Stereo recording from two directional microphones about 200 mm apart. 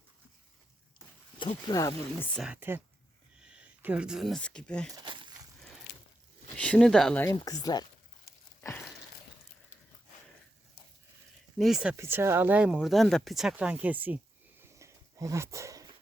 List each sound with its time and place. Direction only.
1.4 s speech: 20° left (ahead or behind)
2.3 s speech: 5° right (ahead or behind)
4.9 s a sound: 25° right (ahead or behind)
6.6 s speech: 5° left (ahead or behind)
7.3 s speech: 20° left (ahead or behind)
11.5 s speech: centre (ahead or behind)
14.6 s dog: 15° right (ahead or behind)